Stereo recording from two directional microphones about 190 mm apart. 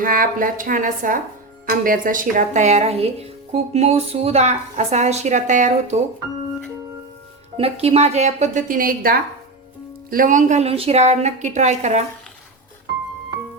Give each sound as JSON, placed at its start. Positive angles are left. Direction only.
{"t": 0.0, "sound": "speech", "side_deg": -45}
{"t": 7.5, "sound": "speech", "side_deg": -30}